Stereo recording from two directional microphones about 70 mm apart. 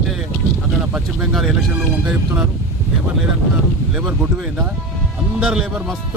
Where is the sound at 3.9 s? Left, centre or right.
Centre.